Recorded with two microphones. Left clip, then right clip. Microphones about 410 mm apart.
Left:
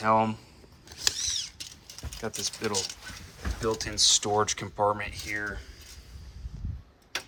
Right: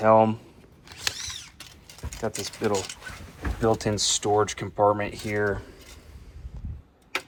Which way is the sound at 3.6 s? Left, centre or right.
Centre.